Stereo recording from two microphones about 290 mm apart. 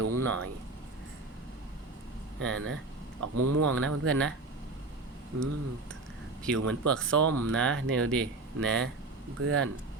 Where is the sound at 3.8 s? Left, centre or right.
Right.